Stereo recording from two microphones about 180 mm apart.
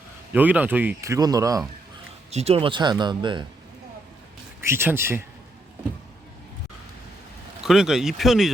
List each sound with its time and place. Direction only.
0.3 s speech: 10° right (ahead or behind)
2.3 s speech: 35° right (ahead or behind)
4.6 s speech: 15° right (ahead or behind)
7.6 s speech: 5° right (ahead or behind)